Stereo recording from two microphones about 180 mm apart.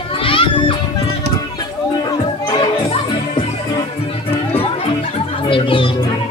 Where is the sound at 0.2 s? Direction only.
30° left (ahead or behind).